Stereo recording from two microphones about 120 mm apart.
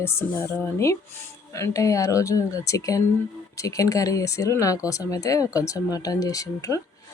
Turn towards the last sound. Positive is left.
turn(degrees=30)  # may be behind; listen again after turning